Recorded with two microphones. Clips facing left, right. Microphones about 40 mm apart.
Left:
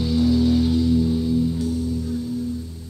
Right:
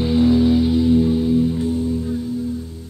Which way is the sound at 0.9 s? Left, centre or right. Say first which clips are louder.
Right 4 dB; right.